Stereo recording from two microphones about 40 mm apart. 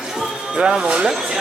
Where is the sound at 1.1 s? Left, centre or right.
Centre.